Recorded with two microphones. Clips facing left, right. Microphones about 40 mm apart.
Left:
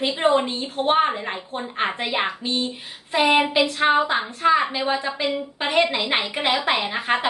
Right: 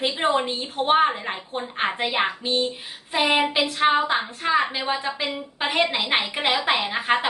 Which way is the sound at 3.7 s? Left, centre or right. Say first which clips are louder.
Right 1 dB; centre.